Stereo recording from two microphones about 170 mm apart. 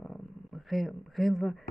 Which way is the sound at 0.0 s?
Centre (ahead or behind).